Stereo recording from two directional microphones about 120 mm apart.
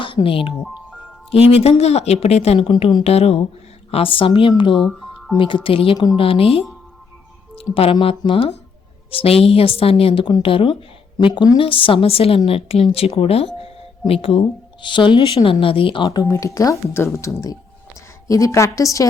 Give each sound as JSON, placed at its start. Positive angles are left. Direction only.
{"t": 0.0, "sound": "a woman's voice", "side_deg": 45}
{"t": 4.8, "sound": "music", "side_deg": 0}
{"t": 5.4, "sound": "a woman's voice", "side_deg": 45}
{"t": 10.2, "sound": "a woman's voice", "side_deg": 45}
{"t": 16.0, "sound": "speech", "side_deg": 30}